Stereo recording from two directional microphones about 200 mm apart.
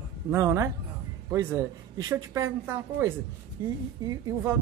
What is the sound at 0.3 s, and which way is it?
Speech, 15° right (ahead or behind).